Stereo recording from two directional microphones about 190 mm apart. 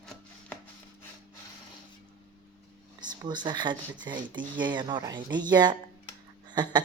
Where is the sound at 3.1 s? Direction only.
20° right (ahead or behind).